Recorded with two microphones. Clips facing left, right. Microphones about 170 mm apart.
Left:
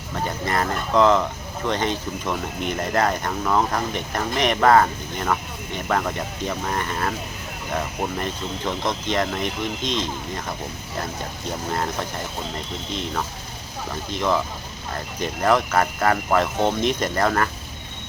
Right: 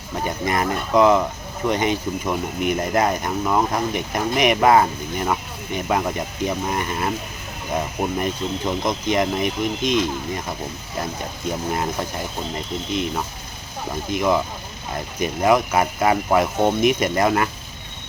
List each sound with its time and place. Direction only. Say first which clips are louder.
0.3 s speech: right 3 dB; 15° right (ahead or behind)
12.9 s speech: right 3 dB; 10° right (ahead or behind)